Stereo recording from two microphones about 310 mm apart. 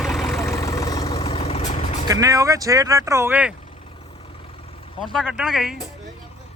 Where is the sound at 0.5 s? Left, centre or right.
Centre.